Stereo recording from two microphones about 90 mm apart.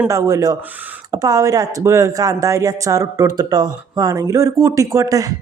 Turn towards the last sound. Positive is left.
turn(degrees=-40)  # may be behind; listen again after turning